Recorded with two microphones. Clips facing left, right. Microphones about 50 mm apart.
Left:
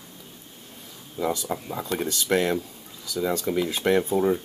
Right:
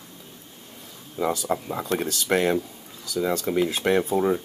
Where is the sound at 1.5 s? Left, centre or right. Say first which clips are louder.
Right 3 dB; centre.